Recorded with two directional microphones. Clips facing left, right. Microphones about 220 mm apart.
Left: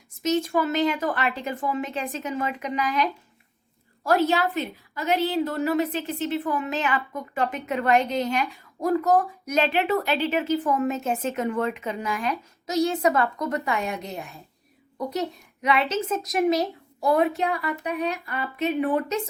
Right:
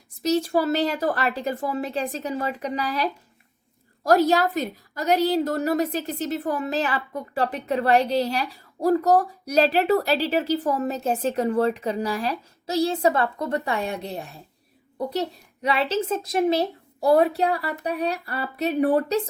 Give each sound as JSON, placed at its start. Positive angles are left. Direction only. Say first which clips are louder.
{"t": 0.2, "sound": "speech", "louder": "right 2 dB", "side_deg": -35}
{"t": 15.6, "sound": "speech", "louder": "even", "side_deg": -35}